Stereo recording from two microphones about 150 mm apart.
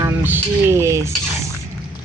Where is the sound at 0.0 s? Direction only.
15° right (ahead or behind).